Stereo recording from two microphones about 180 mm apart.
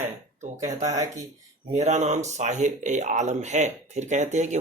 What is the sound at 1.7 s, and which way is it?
Speech, 40° right (ahead or behind).